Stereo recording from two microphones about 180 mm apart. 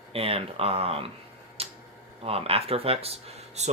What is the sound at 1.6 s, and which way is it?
Tick-tock, 35° right (ahead or behind).